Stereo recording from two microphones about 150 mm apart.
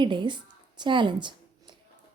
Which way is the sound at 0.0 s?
30° right (ahead or behind).